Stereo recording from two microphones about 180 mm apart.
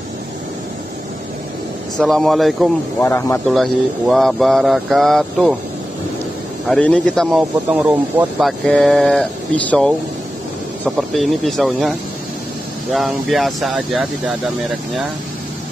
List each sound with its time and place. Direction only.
2.0 s speech: centre (ahead or behind)
3.0 s speech: 15° left (ahead or behind)
3.4 s speech: centre (ahead or behind)
6.7 s speech: 5° left (ahead or behind)
11.0 s speech: centre (ahead or behind)
12.9 s speech: centre (ahead or behind)